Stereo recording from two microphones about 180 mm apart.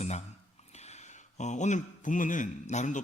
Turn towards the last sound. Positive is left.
turn(degrees=40)  # may be behind; listen again after turning